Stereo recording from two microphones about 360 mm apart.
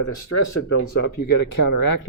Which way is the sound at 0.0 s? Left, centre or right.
Left.